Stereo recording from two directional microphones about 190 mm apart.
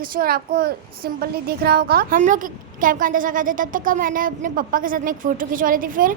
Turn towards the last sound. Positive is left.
turn(degrees=-45)  # may be behind; listen again after turning